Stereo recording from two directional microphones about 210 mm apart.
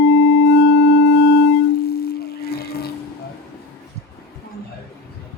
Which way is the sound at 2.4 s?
50° left (ahead or behind).